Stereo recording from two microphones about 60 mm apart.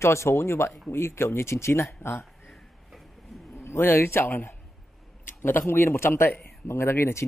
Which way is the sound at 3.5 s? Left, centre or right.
Left.